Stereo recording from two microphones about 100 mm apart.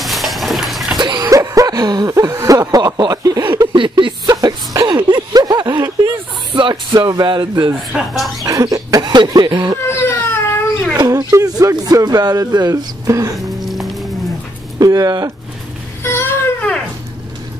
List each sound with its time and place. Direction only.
0.0 s a sound: centre (ahead or behind)
0.9 s a sound: 45° right (ahead or behind)
3.7 s a sound: 55° right (ahead or behind)
7.9 s speech: centre (ahead or behind)
8.5 s speech: 35° right (ahead or behind)
9.8 s baby cry: 25° left (ahead or behind)
11.0 s speech: 30° right (ahead or behind)
13.4 s music: centre (ahead or behind)
14.8 s speech: 40° right (ahead or behind)